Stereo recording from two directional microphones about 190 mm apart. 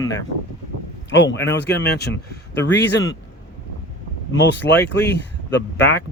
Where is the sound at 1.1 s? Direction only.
70° left (ahead or behind).